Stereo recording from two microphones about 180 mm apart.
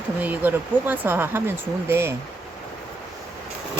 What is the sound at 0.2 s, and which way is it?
Speech, 10° right (ahead or behind).